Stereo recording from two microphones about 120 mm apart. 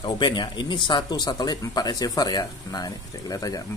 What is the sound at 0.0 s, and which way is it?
Speech, 40° left (ahead or behind).